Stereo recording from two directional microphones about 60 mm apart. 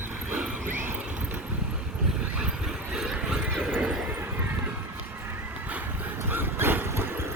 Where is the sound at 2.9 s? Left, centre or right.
Centre.